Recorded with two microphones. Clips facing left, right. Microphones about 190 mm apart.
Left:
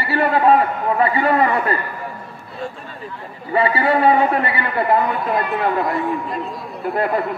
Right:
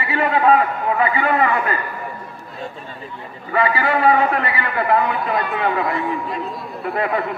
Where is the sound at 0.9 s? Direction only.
35° left (ahead or behind).